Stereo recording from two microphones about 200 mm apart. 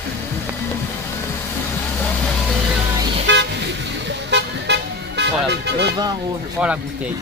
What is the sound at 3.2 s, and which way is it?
Vehicle, 60° right (ahead or behind).